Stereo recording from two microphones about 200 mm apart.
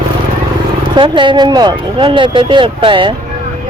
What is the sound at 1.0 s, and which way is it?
Speech, 25° right (ahead or behind).